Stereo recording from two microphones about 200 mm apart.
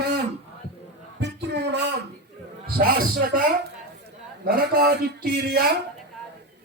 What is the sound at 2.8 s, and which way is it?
Speech, 50° right (ahead or behind).